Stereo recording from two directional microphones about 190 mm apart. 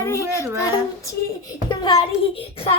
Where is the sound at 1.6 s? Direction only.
25° left (ahead or behind).